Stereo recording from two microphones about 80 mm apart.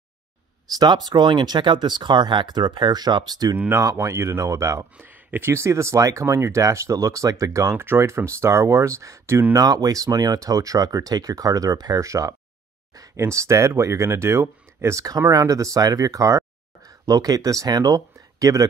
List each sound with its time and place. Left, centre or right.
0.7 s speech: right
3.5 s speech: right
3.8 s speech: right
4.9 s speech: right
7.7 s speech: right
9.6 s speech: right
12.9 s a sound: right
13.2 s speech: right